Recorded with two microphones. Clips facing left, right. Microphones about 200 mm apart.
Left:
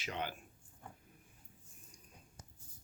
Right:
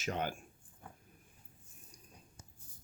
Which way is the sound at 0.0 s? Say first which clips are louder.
Right 4 dB; 45° right (ahead or behind).